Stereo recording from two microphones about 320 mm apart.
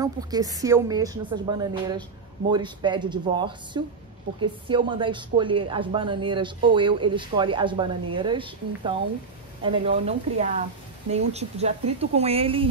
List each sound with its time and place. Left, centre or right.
0.0 s a woman's voice: centre